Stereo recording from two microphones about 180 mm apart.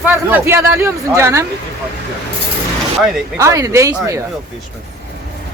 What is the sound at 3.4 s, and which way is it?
Speech, 15° right (ahead or behind).